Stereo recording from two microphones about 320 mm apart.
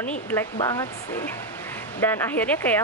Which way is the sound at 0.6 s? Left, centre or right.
Centre.